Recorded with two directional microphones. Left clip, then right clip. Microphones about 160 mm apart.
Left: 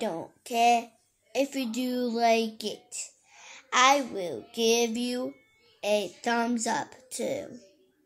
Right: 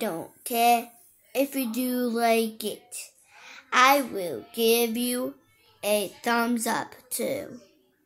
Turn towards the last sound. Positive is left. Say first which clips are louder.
# right 2 dB
turn(degrees=-15)  # may be behind; listen again after turning